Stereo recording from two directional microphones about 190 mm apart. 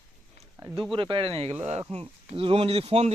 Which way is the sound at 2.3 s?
30° right (ahead or behind).